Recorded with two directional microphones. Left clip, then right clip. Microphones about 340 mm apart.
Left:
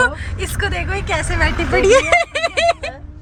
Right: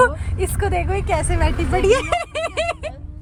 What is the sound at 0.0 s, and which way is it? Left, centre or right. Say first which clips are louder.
Speech: right 1 dB; centre.